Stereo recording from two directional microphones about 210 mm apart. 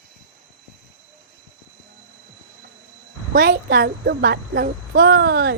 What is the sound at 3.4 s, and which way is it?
A woman's voice, 45° right (ahead or behind).